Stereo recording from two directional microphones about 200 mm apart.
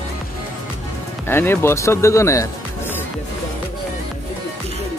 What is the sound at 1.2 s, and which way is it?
Speech, 10° left (ahead or behind).